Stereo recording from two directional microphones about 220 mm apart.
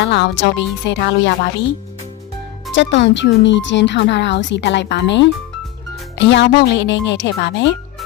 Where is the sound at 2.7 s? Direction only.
55° left (ahead or behind).